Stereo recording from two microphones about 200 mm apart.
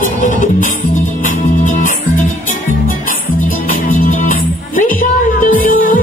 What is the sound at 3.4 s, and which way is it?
Music, 45° left (ahead or behind).